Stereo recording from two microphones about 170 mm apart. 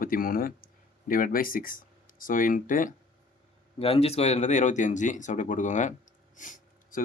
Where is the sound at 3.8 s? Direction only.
35° left (ahead or behind).